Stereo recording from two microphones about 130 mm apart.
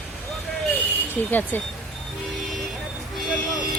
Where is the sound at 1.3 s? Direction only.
15° left (ahead or behind).